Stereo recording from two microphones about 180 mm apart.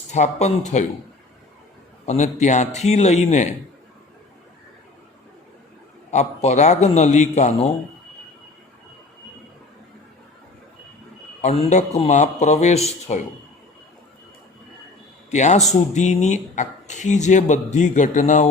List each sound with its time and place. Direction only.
0.1 s speech: 40° left (ahead or behind)
2.0 s speech: 40° left (ahead or behind)
6.1 s speech: 40° left (ahead or behind)
11.3 s speech: 35° left (ahead or behind)
15.3 s speech: 40° left (ahead or behind)